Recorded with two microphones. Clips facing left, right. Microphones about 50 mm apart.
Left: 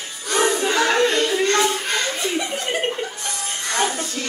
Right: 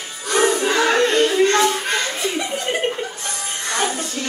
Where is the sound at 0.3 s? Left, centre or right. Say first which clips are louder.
Right 2 dB; centre.